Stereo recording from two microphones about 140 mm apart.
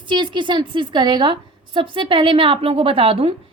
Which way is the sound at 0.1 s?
35° right (ahead or behind).